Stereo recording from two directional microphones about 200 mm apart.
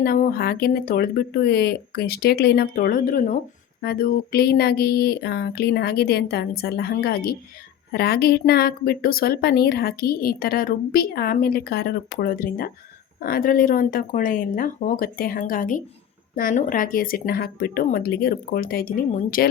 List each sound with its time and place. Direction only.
0.0 s a woman's voice: 50° left (ahead or behind)